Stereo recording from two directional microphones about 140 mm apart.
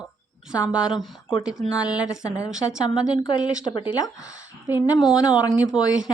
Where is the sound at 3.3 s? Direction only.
35° left (ahead or behind).